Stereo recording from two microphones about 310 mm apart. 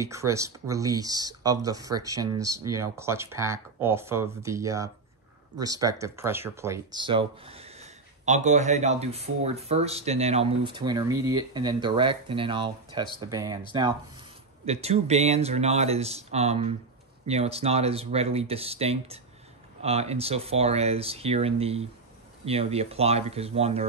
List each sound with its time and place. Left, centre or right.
0.0 s speech: centre
14.7 s speech: right